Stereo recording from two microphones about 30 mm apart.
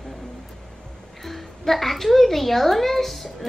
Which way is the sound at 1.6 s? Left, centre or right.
Centre.